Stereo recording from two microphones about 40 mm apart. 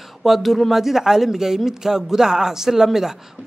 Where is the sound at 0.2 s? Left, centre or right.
Centre.